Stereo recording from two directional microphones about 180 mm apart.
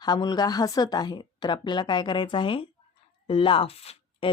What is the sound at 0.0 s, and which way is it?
Speech, 25° left (ahead or behind).